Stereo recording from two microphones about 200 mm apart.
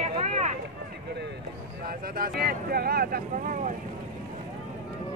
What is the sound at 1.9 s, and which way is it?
Speech, 45° right (ahead or behind).